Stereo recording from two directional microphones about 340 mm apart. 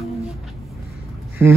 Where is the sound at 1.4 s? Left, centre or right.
Centre.